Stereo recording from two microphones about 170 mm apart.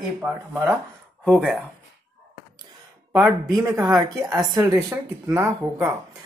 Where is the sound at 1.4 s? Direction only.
Centre (ahead or behind).